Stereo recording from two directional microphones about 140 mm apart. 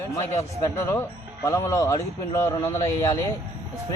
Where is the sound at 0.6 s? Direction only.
20° left (ahead or behind).